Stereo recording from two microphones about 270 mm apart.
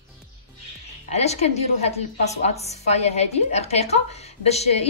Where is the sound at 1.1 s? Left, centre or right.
Left.